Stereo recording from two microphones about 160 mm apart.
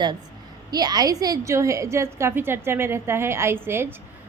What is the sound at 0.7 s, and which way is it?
A woman's voice, 25° right (ahead or behind).